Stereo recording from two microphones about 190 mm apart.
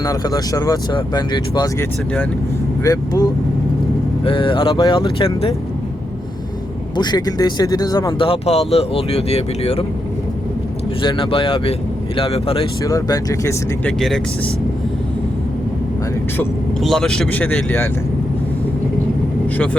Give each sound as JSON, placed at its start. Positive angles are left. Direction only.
{"t": 0.0, "sound": "speech", "side_deg": 20}
{"t": 6.9, "sound": "speech", "side_deg": 20}
{"t": 11.0, "sound": "speech", "side_deg": 25}
{"t": 12.8, "sound": "speech", "side_deg": 20}
{"t": 16.8, "sound": "speech", "side_deg": 0}